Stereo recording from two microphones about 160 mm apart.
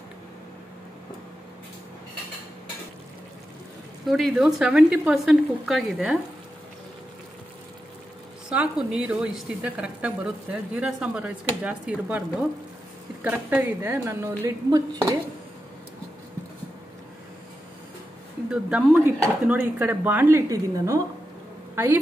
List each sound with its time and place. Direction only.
4.1 s speech: centre (ahead or behind)
8.5 s a woman's voice: 5° right (ahead or behind)
18.5 s a woman's voice: 5° right (ahead or behind)